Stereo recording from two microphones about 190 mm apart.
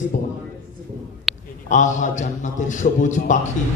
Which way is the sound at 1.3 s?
Centre (ahead or behind).